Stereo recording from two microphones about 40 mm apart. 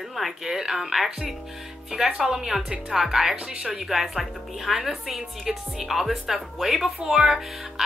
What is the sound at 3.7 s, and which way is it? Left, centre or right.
Speech, centre.